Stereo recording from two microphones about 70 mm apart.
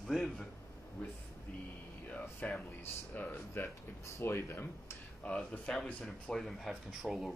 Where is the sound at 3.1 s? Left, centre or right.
Left.